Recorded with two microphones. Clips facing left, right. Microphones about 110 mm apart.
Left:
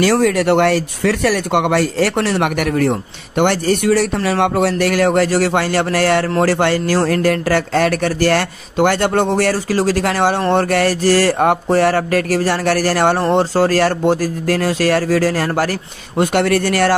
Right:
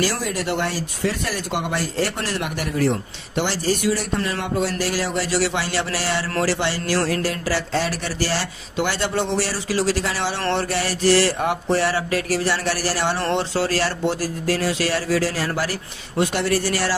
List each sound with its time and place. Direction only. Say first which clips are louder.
0.0 s speech: left 10 dB; 65° left (ahead or behind); by 15.7 s 50° left (ahead or behind)
16.2 s speech: left 6 dB; 65° left (ahead or behind)